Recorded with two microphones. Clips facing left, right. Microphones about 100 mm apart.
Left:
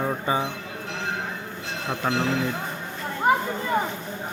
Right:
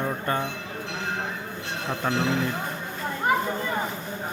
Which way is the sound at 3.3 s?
25° left (ahead or behind).